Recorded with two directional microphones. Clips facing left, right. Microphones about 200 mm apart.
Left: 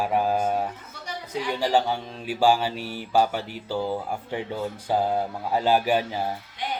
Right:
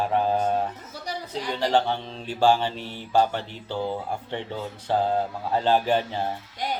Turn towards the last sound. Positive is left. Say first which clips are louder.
# right 2 dB
turn(degrees=-40)  # may be behind; listen again after turning